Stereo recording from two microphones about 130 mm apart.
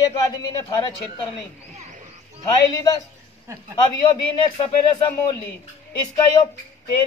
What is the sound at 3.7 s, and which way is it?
Speech, 35° left (ahead or behind).